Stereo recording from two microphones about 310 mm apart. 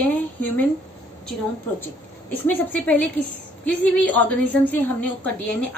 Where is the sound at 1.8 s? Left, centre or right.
Centre.